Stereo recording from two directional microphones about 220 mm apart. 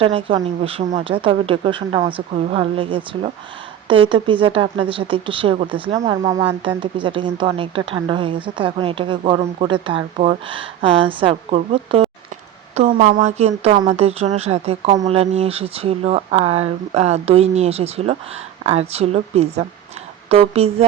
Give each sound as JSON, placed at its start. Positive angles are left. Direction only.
{"t": 0.0, "sound": "speech", "side_deg": -25}
{"t": 12.7, "sound": "speech", "side_deg": -35}